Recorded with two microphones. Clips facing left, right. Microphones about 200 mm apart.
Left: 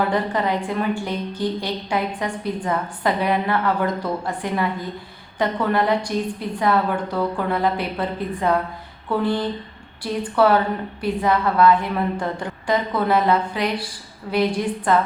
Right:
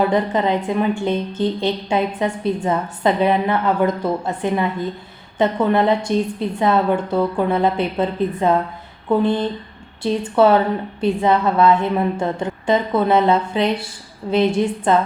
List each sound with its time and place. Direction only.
0.1 s a woman's voice: 20° right (ahead or behind)